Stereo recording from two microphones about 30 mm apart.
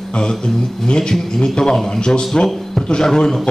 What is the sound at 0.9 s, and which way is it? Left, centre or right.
A man's voice, left.